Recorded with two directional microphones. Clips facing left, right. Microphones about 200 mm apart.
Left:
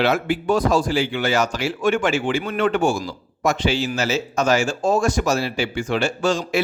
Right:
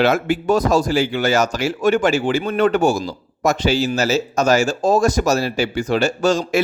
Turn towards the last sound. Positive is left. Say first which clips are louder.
# right 3 dB
turn(degrees=-45)  # may be behind; listen again after turning